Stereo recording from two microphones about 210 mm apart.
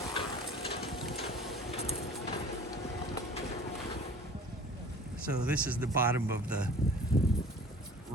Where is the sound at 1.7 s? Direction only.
30° left (ahead or behind).